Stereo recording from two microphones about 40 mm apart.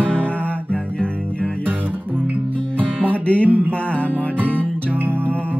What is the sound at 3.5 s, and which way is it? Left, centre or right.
Music, right.